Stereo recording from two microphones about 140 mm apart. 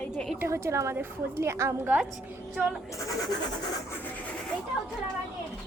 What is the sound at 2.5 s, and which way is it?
Speech, 5° right (ahead or behind).